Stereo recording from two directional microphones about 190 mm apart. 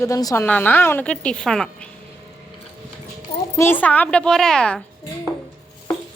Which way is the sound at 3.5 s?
10° left (ahead or behind).